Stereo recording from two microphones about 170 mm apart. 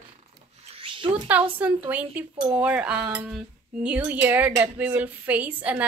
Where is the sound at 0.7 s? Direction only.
30° right (ahead or behind).